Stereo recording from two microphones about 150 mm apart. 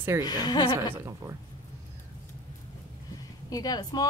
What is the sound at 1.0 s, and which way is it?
Speech, 20° right (ahead or behind).